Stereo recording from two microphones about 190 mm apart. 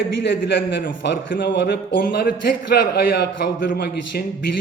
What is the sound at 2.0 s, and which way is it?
A man's voice, 50° left (ahead or behind).